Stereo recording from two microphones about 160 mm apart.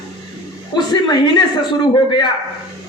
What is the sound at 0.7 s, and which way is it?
Speech, 25° left (ahead or behind).